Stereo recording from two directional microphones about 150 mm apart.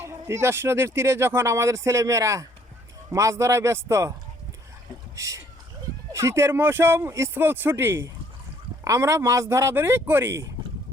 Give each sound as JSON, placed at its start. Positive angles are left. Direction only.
{"t": 0.0, "sound": "speech", "side_deg": -15}
{"t": 5.1, "sound": "speech", "side_deg": -20}